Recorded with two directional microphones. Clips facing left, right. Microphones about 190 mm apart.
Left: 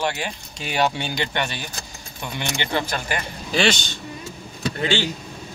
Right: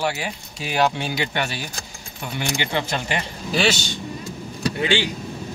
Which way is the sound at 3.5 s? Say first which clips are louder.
Even; 5° right (ahead or behind).